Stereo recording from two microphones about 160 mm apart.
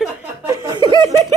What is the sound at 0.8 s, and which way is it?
Speech, 30° right (ahead or behind).